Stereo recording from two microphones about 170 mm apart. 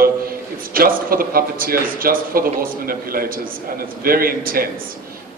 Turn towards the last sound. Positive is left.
turn(degrees=-60)  # may be behind; listen again after turning